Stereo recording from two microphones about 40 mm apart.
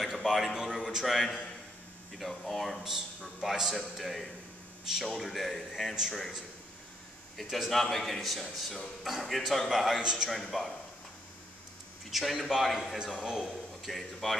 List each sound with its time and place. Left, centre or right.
0.0 s a sound: centre
0.6 s speech: centre
2.8 s a man's voice: centre
7.4 s speech: centre
9.9 s a man's voice: centre
10.5 s speech: centre
12.1 s a man's voice: centre